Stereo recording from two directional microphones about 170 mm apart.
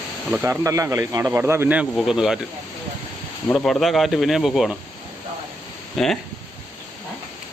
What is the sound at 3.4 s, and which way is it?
Speech, centre (ahead or behind).